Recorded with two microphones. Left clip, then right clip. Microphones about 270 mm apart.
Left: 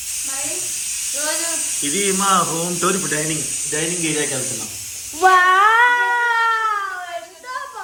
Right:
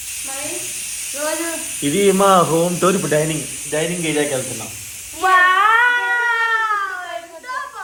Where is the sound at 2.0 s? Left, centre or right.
Centre.